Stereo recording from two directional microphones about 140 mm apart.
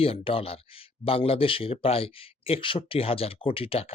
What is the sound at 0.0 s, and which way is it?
Speech, 40° left (ahead or behind).